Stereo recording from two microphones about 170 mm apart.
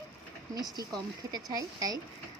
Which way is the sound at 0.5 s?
25° right (ahead or behind).